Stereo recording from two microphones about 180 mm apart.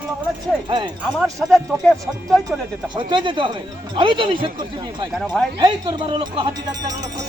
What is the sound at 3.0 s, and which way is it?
Speech, 25° right (ahead or behind).